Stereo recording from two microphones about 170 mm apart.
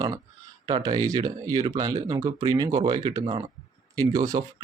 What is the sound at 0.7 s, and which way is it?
Speech, 25° right (ahead or behind).